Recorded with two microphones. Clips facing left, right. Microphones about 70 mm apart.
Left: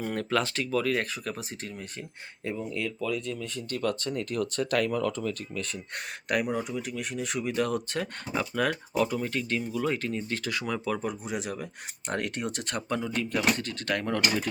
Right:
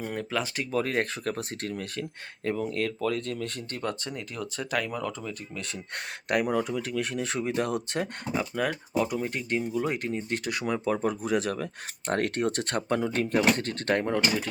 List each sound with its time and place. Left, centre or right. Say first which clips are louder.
0.0 s speech: left 3 dB; centre
0.7 s speech: right 1 dB; right
2.4 s speech: right 4 dB; right
4.1 s speech: left 6 dB; centre
6.5 s speech: right 3 dB; right
7.3 s speech: left 1 dB; right
8.4 s speech: left 1 dB; centre
9.1 s speech: right 1 dB; right
11.0 s speech: right 6 dB; right